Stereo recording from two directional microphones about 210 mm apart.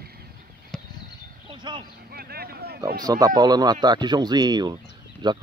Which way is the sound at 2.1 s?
45° right (ahead or behind).